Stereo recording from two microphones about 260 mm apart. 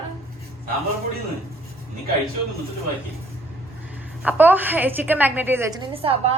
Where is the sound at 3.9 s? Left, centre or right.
Centre.